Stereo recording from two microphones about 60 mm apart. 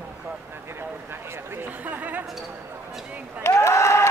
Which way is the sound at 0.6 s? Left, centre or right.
Right.